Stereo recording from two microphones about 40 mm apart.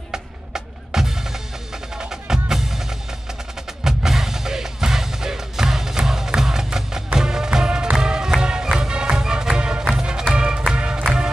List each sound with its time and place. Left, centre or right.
0.1 s music: centre
2.0 s percussion: centre
3.8 s music: centre